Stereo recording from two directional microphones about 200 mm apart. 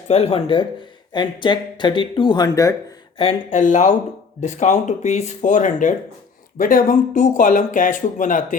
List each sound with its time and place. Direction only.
0.1 s speech: 30° left (ahead or behind)
3.2 s speech: 35° left (ahead or behind)